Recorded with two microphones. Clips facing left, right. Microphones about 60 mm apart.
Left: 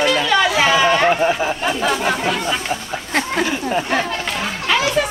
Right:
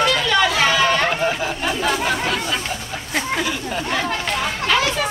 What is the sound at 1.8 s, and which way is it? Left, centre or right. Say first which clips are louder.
Chatter: left 2 dB; centre.